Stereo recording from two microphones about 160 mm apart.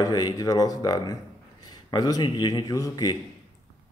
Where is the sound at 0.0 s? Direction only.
25° left (ahead or behind).